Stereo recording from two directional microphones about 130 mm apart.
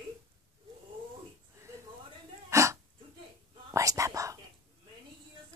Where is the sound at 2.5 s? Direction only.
20° right (ahead or behind).